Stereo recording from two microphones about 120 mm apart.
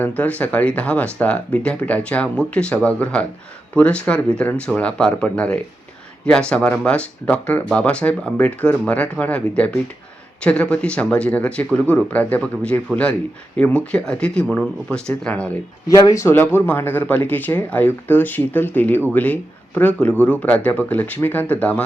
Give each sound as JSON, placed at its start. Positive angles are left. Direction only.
{"t": 0.0, "sound": "speech", "side_deg": 10}
{"t": 15.9, "sound": "speech", "side_deg": 25}